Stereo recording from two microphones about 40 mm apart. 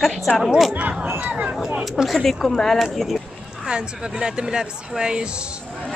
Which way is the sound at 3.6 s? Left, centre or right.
Right.